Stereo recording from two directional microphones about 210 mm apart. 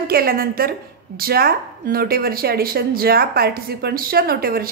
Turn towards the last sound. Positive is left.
turn(degrees=-45)  # may be behind; listen again after turning